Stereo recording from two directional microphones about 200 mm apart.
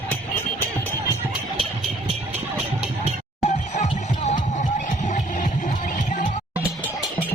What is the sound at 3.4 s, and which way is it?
Music, 35° left (ahead or behind).